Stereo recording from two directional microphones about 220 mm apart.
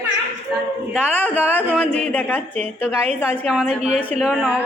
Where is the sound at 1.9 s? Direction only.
5° left (ahead or behind).